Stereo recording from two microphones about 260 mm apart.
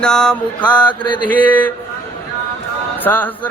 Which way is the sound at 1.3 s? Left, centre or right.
Centre.